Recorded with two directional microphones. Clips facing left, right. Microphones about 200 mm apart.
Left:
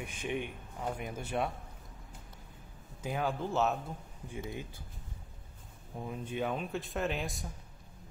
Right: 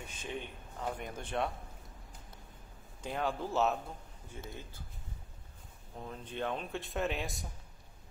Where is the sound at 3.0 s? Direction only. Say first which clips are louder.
Left 1 dB; centre (ahead or behind).